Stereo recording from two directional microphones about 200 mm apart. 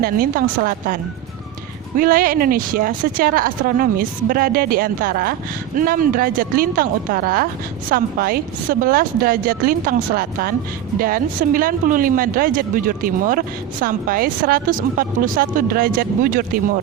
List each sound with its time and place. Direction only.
0.0 s speech: 45° right (ahead or behind)
2.0 s speech: 45° right (ahead or behind)